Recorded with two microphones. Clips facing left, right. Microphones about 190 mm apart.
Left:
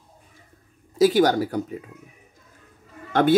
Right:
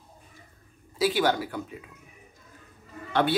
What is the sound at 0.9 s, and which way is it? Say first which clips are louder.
Speech: left 7 dB; 45° left (ahead or behind).